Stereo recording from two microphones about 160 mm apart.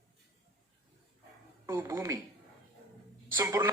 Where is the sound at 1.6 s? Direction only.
20° right (ahead or behind).